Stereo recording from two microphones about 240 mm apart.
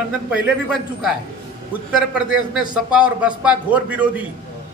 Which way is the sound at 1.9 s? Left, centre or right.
Centre.